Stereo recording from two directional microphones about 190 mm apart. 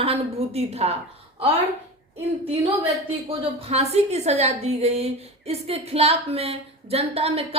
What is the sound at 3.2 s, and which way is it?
A woman's voice, 30° right (ahead or behind).